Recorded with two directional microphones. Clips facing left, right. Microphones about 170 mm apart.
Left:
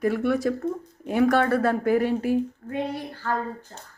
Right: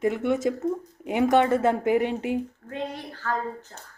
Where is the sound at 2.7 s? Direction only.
10° left (ahead or behind).